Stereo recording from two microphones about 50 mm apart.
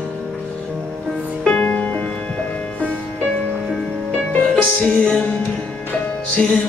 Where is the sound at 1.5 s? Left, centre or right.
Left.